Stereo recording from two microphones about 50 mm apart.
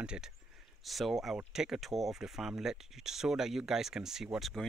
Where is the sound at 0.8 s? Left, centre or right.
Centre.